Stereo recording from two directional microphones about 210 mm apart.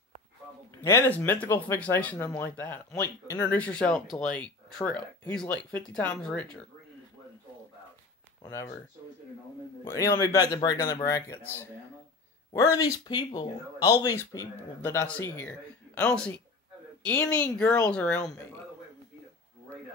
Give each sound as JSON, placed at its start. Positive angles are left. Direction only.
{"t": 0.8, "sound": "speech", "side_deg": 10}
{"t": 8.4, "sound": "speech", "side_deg": 15}
{"t": 9.8, "sound": "speech", "side_deg": 15}
{"t": 12.7, "sound": "speech", "side_deg": 15}